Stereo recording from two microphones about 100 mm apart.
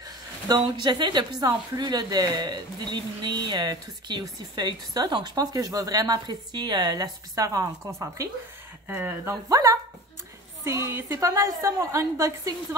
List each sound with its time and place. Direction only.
0.5 s speech: 45° right (ahead or behind)
8.8 s speech: 20° right (ahead or behind)
9.5 s a woman's voice: 35° right (ahead or behind)